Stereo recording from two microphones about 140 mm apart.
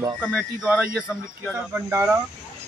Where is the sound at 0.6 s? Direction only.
10° right (ahead or behind).